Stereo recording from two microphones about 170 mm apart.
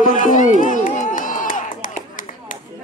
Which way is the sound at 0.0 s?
50° left (ahead or behind).